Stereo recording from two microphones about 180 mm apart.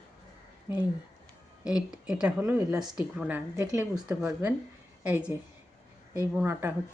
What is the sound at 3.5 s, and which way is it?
Speech, 20° right (ahead or behind).